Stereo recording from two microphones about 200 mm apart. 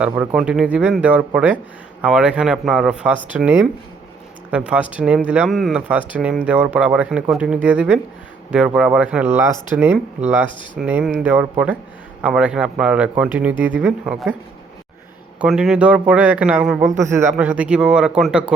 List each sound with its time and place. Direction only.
0.3 s speech: 5° right (ahead or behind)
15.4 s speech: 5° right (ahead or behind)